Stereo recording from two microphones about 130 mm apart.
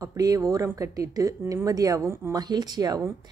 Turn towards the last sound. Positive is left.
turn(degrees=-30)  # may be behind; listen again after turning